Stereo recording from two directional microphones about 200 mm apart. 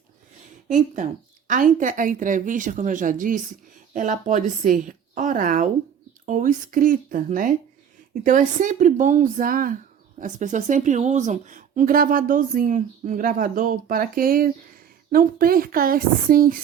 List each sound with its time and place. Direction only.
1.5 s a woman's voice: 40° right (ahead or behind)